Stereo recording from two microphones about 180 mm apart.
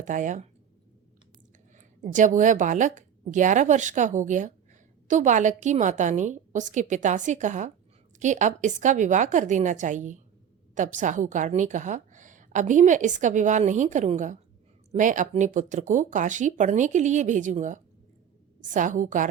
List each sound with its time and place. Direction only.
0.0 s a woman's voice: 45° right (ahead or behind)
1.7 s a woman's voice: 45° right (ahead or behind)